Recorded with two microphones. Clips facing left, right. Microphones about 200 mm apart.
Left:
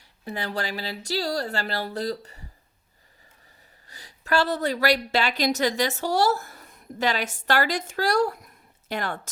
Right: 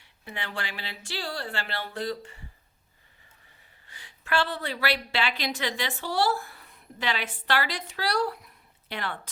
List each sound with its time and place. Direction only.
0.0 s speech: 40° left (ahead or behind)
3.8 s a woman's voice: 40° left (ahead or behind)